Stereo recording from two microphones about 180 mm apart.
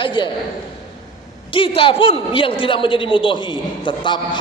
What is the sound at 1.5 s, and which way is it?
A man's voice, 30° left (ahead or behind).